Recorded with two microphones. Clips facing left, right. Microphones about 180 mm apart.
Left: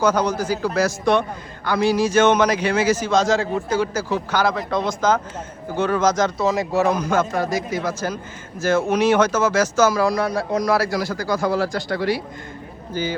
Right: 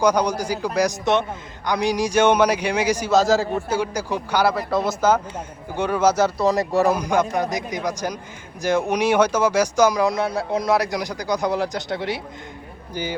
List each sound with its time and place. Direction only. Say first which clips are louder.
0.0 s a man's voice: even; 15° right (ahead or behind)
3.2 s a man's voice: right 1 dB; centre (ahead or behind)
3.8 s a man's voice: left 2 dB; 15° right (ahead or behind)
7.0 s a man's voice: even; 15° right (ahead or behind)